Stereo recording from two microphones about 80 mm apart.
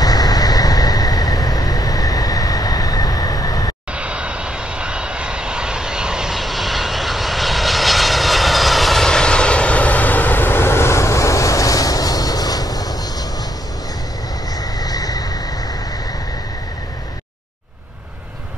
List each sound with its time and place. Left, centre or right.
0.0 s vehicle: left
3.9 s vehicle: centre; by 12.9 s left
14.6 s vehicle: left